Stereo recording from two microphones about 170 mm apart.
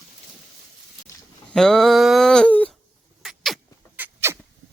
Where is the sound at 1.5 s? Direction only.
Centre (ahead or behind).